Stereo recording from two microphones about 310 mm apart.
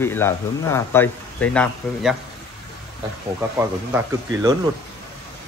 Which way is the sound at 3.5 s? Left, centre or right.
Centre.